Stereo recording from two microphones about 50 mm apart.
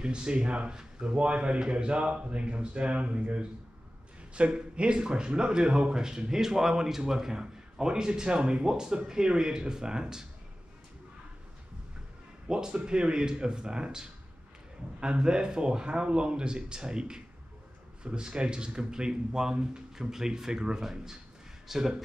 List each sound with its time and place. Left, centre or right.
0.0 s a man's voice: centre
12.4 s speech: centre